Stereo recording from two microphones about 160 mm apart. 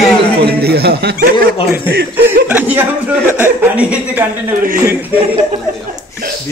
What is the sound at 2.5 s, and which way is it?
Speech, 10° right (ahead or behind).